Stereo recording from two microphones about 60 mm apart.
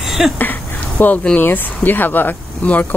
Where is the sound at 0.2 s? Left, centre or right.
Centre.